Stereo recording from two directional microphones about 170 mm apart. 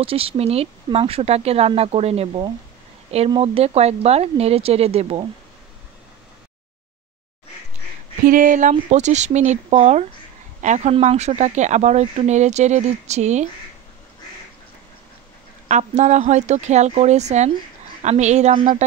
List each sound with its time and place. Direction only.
0.0 s speech: 35° right (ahead or behind)
8.3 s speech: 50° right (ahead or behind)
15.7 s speech: 45° right (ahead or behind)